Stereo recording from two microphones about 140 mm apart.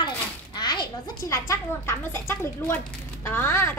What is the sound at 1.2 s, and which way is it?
Speech, 20° left (ahead or behind).